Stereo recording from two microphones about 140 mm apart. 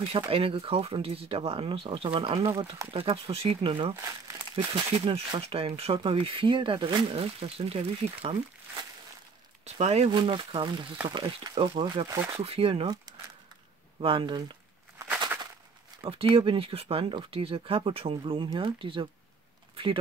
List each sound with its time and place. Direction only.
0.1 s speech: 40° right (ahead or behind)
3.9 s speech: 20° right (ahead or behind)
4.9 s speech: 45° right (ahead or behind)
10.1 s speech: 35° right (ahead or behind)
13.9 s speech: 40° right (ahead or behind)
16.0 s speech: 40° right (ahead or behind)